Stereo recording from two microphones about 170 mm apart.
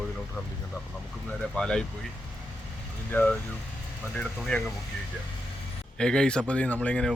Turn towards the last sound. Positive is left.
turn(degrees=5)  # may be behind; listen again after turning